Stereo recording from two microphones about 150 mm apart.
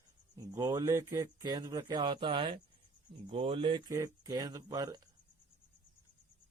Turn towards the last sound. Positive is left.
turn(degrees=-25)  # may be behind; listen again after turning